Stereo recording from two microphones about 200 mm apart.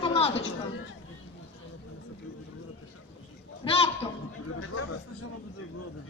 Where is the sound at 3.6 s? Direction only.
30° left (ahead or behind).